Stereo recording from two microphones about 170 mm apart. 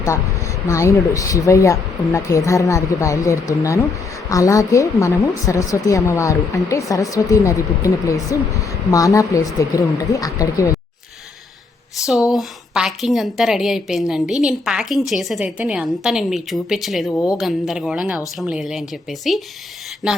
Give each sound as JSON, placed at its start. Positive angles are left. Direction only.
{"t": 0.7, "sound": "a woman's voice", "side_deg": 20}
{"t": 12.3, "sound": "a woman's voice", "side_deg": 0}
{"t": 17.1, "sound": "a woman's voice", "side_deg": 20}
{"t": 17.3, "sound": "a woman's voice", "side_deg": 0}